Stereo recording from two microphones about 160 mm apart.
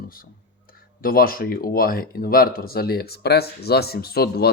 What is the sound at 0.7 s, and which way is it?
Speech, 65° left (ahead or behind).